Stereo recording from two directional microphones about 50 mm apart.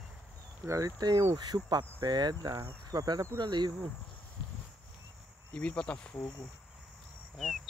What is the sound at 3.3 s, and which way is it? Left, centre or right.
Cricket, right.